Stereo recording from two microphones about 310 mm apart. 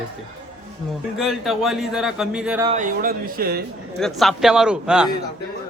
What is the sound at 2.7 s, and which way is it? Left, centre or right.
Speech, right.